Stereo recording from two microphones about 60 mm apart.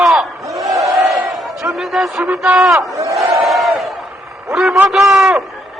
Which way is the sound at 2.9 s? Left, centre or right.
Right.